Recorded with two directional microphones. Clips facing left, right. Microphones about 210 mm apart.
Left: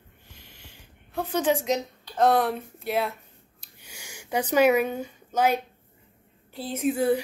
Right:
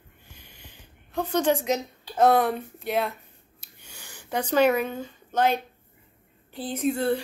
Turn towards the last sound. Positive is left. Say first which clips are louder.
# left 1 dB
turn(degrees=10)  # may be behind; listen again after turning